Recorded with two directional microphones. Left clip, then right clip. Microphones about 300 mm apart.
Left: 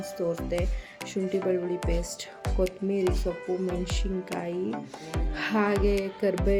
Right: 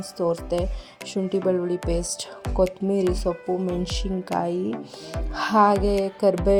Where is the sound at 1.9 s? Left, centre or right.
Right.